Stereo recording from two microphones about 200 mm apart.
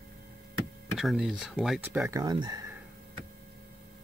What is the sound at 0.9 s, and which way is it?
Speech, centre (ahead or behind).